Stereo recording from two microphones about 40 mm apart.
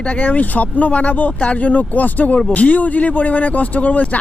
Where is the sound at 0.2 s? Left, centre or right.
Left.